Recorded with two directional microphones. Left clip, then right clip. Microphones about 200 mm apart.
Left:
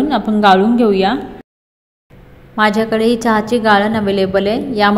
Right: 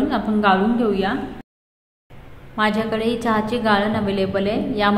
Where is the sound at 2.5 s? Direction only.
30° left (ahead or behind).